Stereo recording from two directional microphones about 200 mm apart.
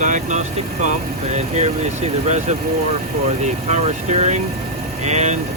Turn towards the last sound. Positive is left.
turn(degrees=-35)  # may be behind; listen again after turning